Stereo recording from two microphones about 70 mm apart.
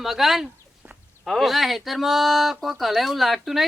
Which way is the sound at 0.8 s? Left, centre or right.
Right.